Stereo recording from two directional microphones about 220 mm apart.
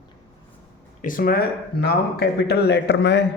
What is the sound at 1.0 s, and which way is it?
A man's voice, 40° left (ahead or behind).